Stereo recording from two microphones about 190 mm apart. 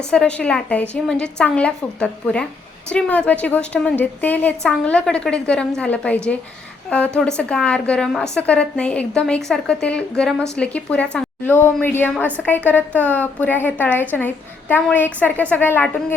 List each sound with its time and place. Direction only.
0.1 s a woman's voice: 5° left (ahead or behind)
7.2 s a woman's voice: 5° left (ahead or behind)